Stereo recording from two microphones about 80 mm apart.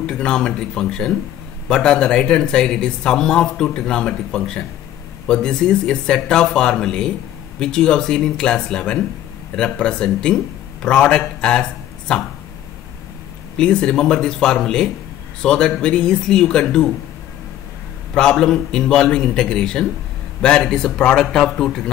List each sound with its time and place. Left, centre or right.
0.0 s a man's voice: centre
13.6 s speech: centre
18.1 s speech: centre